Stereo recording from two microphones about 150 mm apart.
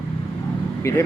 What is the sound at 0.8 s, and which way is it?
Speech, 20° left (ahead or behind).